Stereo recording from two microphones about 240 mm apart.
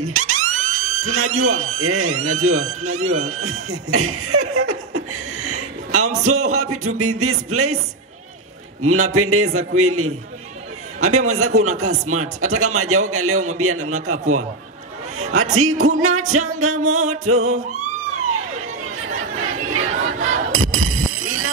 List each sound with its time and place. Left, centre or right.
0.0 s music: right
1.0 s a man's voice: right
8.8 s a man's voice: right
19.1 s chatter: right
20.1 s crowd: right
20.5 s a sound: right